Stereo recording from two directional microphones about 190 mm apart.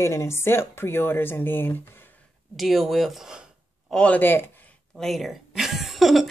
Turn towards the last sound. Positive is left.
turn(degrees=0)  # may be behind; listen again after turning